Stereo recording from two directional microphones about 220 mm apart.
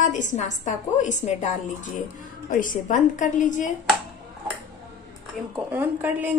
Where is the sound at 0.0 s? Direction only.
35° left (ahead or behind).